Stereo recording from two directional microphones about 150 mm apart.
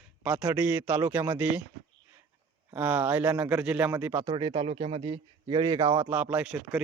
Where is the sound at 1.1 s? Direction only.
25° right (ahead or behind).